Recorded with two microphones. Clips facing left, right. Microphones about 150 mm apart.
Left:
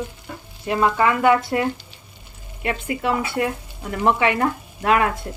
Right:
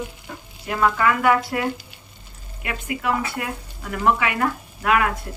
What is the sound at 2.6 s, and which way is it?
Speech, 30° left (ahead or behind).